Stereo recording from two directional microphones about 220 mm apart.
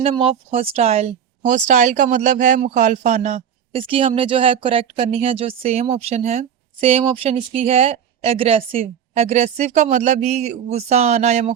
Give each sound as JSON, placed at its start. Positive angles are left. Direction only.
{"t": 0.0, "sound": "speech", "side_deg": -25}